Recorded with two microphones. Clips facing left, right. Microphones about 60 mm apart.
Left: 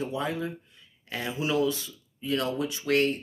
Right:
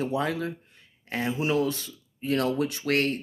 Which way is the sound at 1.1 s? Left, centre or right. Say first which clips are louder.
Right 3 dB; right.